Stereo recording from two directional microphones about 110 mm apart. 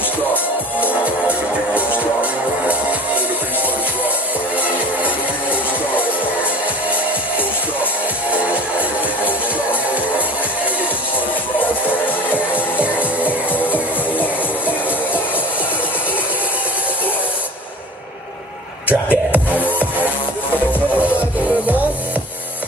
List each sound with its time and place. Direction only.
1.0 s music: 10° right (ahead or behind)
4.6 s music: 15° right (ahead or behind)
8.3 s music: 10° right (ahead or behind)
12.7 s music: 15° right (ahead or behind)
18.9 s music: 15° right (ahead or behind)
19.6 s music: 15° left (ahead or behind)
21.0 s music: 15° right (ahead or behind)